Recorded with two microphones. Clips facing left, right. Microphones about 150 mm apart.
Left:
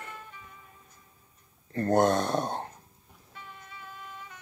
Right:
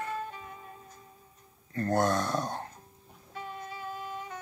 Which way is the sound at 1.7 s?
25° left (ahead or behind).